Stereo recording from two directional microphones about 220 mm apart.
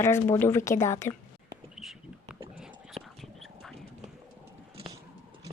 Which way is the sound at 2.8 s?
Centre (ahead or behind).